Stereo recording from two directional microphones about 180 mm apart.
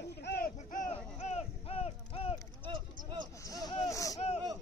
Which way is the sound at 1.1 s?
35° left (ahead or behind).